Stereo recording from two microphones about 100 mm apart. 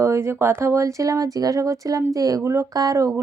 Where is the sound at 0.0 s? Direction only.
30° right (ahead or behind).